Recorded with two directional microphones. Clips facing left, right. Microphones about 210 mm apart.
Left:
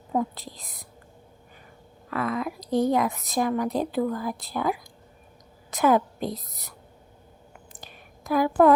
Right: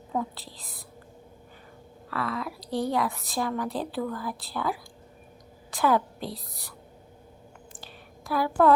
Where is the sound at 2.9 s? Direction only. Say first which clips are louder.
Left 4 dB; 20° left (ahead or behind).